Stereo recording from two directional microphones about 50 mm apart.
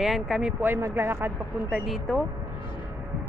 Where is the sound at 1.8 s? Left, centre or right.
Centre.